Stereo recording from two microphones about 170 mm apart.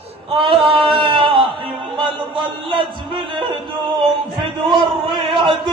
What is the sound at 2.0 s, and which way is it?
Music, 30° right (ahead or behind).